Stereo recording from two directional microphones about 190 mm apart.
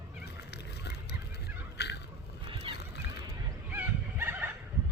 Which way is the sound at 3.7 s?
10° right (ahead or behind).